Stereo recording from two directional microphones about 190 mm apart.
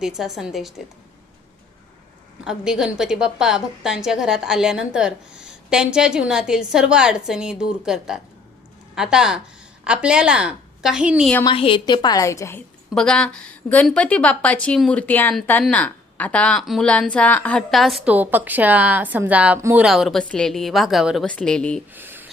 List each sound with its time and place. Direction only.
0.0 s a woman's voice: centre (ahead or behind)
2.4 s a woman's voice: 5° right (ahead or behind)
11.4 s a woman's voice: 30° left (ahead or behind)
12.9 s a woman's voice: 5° left (ahead or behind)
21.9 s a sound: 10° right (ahead or behind)